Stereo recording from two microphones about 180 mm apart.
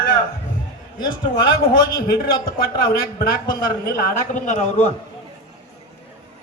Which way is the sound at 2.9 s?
50° left (ahead or behind).